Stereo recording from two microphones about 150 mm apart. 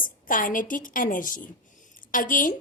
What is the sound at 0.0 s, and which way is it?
A woman's voice, 65° left (ahead or behind).